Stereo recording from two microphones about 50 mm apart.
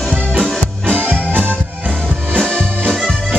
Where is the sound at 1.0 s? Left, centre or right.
Right.